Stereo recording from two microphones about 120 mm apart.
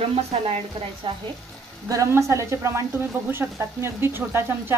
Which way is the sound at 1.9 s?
25° right (ahead or behind).